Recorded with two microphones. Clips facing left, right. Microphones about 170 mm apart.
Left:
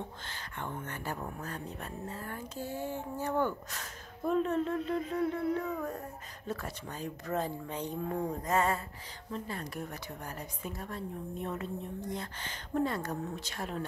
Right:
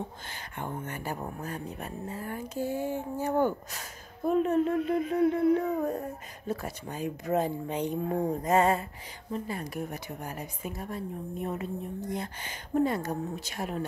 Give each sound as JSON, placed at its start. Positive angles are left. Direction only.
{"t": 0.3, "sound": "speech", "side_deg": -15}
{"t": 5.8, "sound": "a sound", "side_deg": -25}
{"t": 6.4, "sound": "speech", "side_deg": -10}